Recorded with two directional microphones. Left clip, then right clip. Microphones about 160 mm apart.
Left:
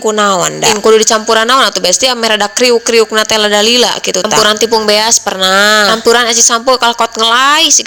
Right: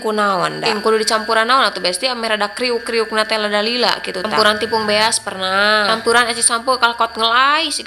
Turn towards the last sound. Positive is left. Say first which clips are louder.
# left 7 dB
turn(degrees=45)  # may be behind; listen again after turning